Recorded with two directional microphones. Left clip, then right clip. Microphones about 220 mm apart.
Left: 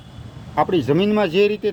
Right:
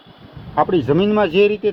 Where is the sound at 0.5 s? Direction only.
15° left (ahead or behind).